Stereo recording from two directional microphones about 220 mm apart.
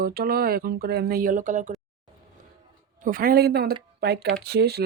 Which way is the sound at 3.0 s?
40° right (ahead or behind).